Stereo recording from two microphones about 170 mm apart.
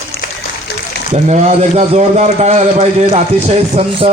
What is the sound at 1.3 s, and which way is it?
Speech, 40° right (ahead or behind).